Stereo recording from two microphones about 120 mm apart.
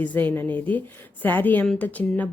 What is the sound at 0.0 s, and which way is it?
Speech, 15° left (ahead or behind).